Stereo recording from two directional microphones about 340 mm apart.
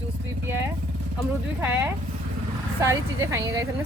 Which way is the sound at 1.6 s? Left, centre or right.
Centre.